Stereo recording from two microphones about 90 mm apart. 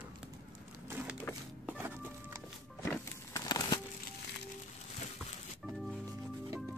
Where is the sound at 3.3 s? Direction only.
40° left (ahead or behind).